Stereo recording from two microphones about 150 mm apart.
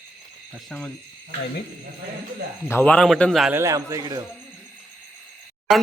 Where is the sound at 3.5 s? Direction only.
20° right (ahead or behind).